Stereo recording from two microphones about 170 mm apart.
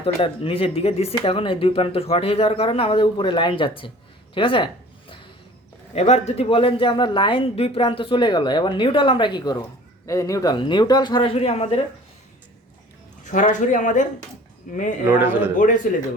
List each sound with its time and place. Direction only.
0.0 s speech: 35° left (ahead or behind)
4.4 s a sound: 30° left (ahead or behind)
5.9 s speech: 40° left (ahead or behind)
13.2 s speech: 45° left (ahead or behind)
15.0 s a man's voice: 10° right (ahead or behind)
15.5 s speech: 50° left (ahead or behind)